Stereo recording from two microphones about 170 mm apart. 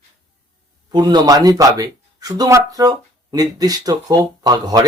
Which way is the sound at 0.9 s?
25° right (ahead or behind).